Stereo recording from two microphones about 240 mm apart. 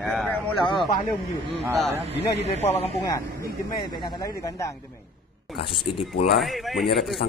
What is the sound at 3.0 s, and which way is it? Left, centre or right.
Speech, centre.